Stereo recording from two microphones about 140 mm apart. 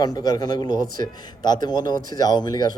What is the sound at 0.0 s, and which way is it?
A man's voice, 30° left (ahead or behind).